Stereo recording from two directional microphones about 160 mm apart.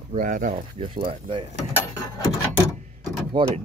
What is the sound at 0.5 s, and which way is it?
Speech, 35° right (ahead or behind).